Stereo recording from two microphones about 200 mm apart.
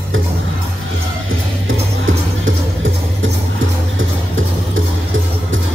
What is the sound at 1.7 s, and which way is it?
Music, 75° right (ahead or behind).